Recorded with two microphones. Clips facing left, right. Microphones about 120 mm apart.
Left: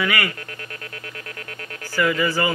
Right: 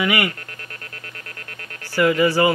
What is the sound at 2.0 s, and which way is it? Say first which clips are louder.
Speech: right 4 dB; 20° right (ahead or behind).